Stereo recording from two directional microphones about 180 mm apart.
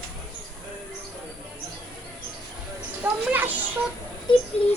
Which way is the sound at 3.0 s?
10° right (ahead or behind).